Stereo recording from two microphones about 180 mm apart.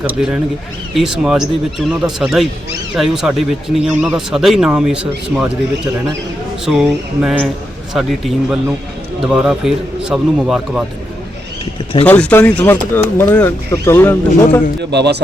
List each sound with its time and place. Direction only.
0.0 s speech: 5° right (ahead or behind)
12.0 s speech: 10° left (ahead or behind)
14.8 s speech: 70° right (ahead or behind)